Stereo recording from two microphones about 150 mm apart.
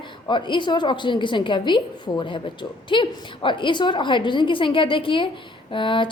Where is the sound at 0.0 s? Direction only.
30° left (ahead or behind).